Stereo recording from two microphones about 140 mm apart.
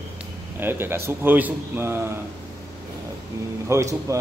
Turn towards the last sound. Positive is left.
turn(degrees=-20)  # may be behind; listen again after turning